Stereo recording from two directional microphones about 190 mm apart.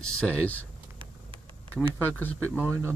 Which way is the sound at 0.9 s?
25° right (ahead or behind).